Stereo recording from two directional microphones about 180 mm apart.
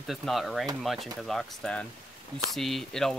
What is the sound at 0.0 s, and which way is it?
Speech, centre (ahead or behind).